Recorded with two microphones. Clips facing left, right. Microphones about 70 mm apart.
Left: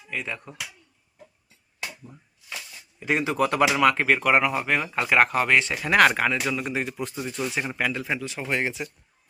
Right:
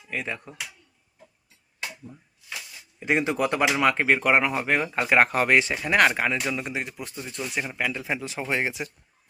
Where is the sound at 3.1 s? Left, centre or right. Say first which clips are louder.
Even; centre.